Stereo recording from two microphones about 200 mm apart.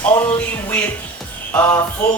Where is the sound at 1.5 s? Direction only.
10° left (ahead or behind).